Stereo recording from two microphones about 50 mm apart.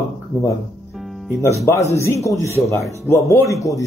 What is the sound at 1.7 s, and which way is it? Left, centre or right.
A man's voice, left.